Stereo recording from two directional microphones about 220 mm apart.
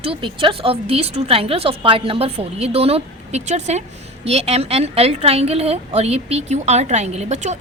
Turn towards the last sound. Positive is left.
turn(degrees=-30)  # may be behind; listen again after turning